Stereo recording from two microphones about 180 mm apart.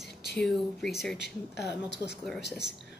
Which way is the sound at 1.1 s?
70° left (ahead or behind).